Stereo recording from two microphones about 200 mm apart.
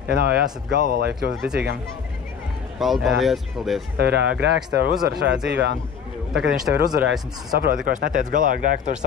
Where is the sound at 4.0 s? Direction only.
55° right (ahead or behind).